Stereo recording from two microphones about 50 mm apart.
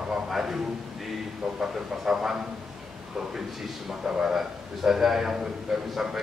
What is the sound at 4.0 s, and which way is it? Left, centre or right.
Speech, centre.